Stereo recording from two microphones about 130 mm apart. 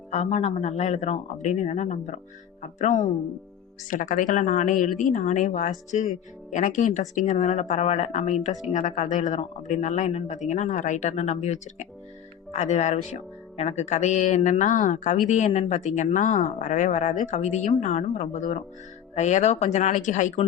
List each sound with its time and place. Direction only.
0.1 s speech: 60° left (ahead or behind)
3.8 s speech: 90° left; by 8.5 s 55° left (ahead or behind)
8.7 s speech: 65° left (ahead or behind)
14.6 s speech: 75° left (ahead or behind)